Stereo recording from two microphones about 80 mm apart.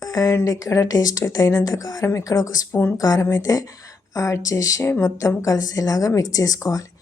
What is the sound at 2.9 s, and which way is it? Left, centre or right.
Speech, left.